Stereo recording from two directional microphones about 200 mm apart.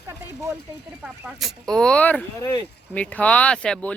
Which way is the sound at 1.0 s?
5° right (ahead or behind).